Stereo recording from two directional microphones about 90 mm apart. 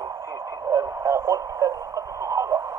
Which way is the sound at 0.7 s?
35° right (ahead or behind).